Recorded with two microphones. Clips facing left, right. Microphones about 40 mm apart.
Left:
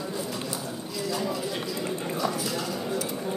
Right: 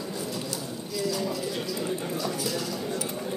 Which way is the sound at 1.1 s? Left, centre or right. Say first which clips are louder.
Left 1 dB; centre.